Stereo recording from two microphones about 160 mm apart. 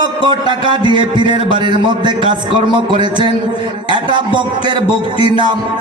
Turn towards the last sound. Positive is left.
turn(degrees=-30)  # may be behind; listen again after turning